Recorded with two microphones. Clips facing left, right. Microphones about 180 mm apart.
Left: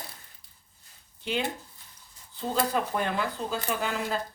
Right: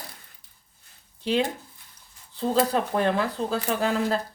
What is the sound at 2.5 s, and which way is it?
Speech, 35° right (ahead or behind).